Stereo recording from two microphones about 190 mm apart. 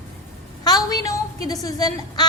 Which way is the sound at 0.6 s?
20° left (ahead or behind).